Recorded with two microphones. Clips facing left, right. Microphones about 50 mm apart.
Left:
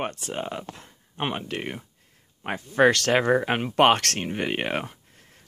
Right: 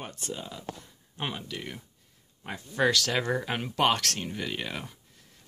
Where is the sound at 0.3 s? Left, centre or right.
Left.